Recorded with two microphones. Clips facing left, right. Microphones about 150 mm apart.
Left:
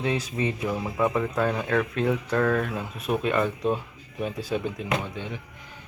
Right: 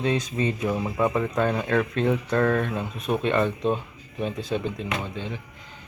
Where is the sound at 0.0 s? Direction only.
10° left (ahead or behind).